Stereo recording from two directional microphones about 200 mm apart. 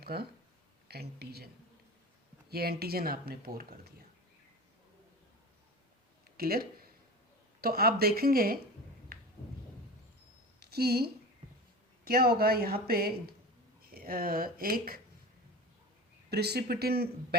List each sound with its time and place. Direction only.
0.0 s speech: 50° right (ahead or behind)
2.5 s speech: 50° right (ahead or behind)
6.3 s speech: 50° right (ahead or behind)
10.6 s a woman's voice: 50° right (ahead or behind)
16.3 s speech: 55° right (ahead or behind)